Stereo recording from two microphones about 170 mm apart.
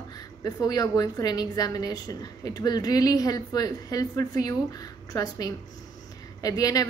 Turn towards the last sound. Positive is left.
turn(degrees=20)  # may be behind; listen again after turning